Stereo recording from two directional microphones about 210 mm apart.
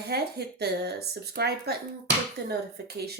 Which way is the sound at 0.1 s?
50° right (ahead or behind).